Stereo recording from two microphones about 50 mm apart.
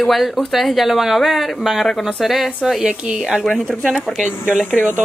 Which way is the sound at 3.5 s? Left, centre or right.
Centre.